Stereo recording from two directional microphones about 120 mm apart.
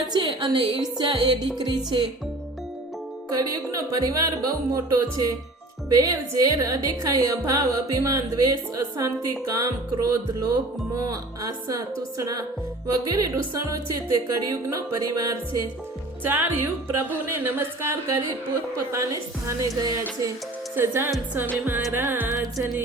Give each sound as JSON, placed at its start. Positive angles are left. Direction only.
{"t": 0.1, "sound": "a woman's voice", "side_deg": -40}
{"t": 3.3, "sound": "speech", "side_deg": -30}
{"t": 5.9, "sound": "music", "side_deg": -30}
{"t": 16.2, "sound": "music", "side_deg": -15}
{"t": 19.5, "sound": "music", "side_deg": -30}